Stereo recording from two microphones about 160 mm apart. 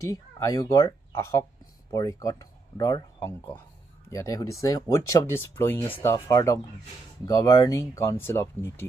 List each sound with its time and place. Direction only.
0.0 s speech: 20° left (ahead or behind)